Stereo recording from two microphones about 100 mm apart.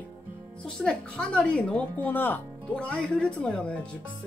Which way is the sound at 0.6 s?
10° left (ahead or behind).